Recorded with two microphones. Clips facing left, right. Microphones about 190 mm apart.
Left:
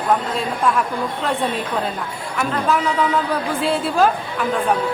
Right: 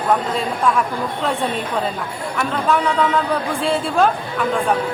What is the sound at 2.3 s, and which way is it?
Speech, centre (ahead or behind).